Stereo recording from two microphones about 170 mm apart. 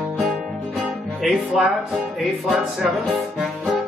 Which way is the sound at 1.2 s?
Centre (ahead or behind).